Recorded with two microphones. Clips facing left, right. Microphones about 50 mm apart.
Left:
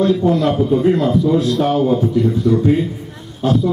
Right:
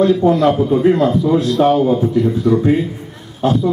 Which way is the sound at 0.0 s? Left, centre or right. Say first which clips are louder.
Right 3 dB; centre.